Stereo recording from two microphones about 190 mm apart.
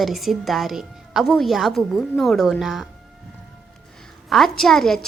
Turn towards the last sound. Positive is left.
turn(degrees=0)  # may be behind; listen again after turning